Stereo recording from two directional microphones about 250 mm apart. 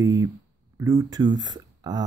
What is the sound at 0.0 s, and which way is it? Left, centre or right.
Speech, centre.